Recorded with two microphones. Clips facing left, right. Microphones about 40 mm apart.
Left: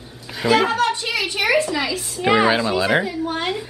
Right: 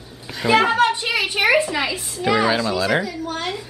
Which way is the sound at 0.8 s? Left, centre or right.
Centre.